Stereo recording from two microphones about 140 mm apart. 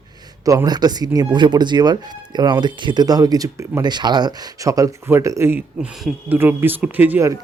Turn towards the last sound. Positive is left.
turn(degrees=-15)  # may be behind; listen again after turning